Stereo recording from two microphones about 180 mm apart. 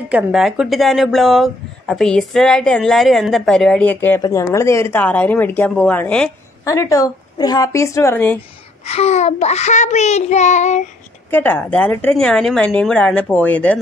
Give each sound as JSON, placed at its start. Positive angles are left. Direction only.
{"t": 0.1, "sound": "speech", "side_deg": -5}
{"t": 6.6, "sound": "speech", "side_deg": 15}
{"t": 8.8, "sound": "child singing", "side_deg": 35}
{"t": 11.2, "sound": "speech", "side_deg": 10}